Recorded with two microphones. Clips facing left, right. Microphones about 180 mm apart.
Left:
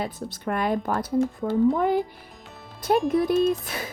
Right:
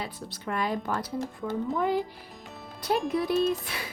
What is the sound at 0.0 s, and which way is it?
Speech, 50° left (ahead or behind).